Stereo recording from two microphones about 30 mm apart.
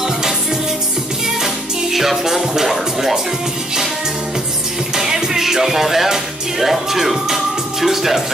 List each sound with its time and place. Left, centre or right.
1.2 s music: centre
2.4 s speech: centre
2.7 s speech: centre
4.9 s music: centre